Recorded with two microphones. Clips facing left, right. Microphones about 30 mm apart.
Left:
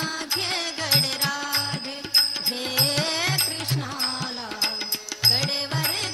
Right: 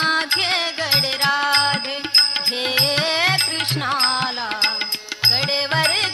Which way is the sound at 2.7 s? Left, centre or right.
Right.